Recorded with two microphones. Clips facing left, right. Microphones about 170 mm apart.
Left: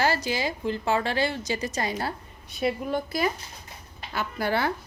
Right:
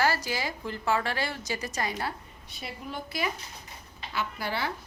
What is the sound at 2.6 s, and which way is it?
A woman's voice, 55° left (ahead or behind).